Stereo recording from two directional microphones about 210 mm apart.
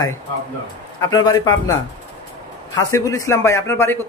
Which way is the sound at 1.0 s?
15° left (ahead or behind).